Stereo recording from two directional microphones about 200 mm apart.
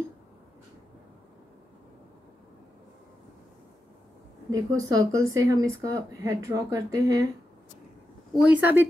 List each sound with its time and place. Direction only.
4.5 s speech: 15° right (ahead or behind)
8.4 s speech: 5° right (ahead or behind)